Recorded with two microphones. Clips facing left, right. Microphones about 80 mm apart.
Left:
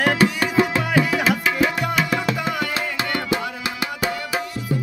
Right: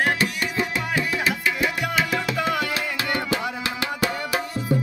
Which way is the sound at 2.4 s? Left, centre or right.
Centre.